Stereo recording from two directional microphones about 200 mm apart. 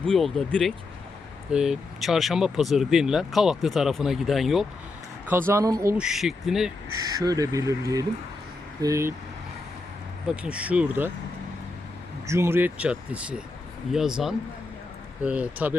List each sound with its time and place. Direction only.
0.0 s speech: centre (ahead or behind)
5.3 s speech: 10° right (ahead or behind)
7.0 s speech: 15° right (ahead or behind)
10.2 s speech: 5° right (ahead or behind)
12.3 s speech: 10° right (ahead or behind)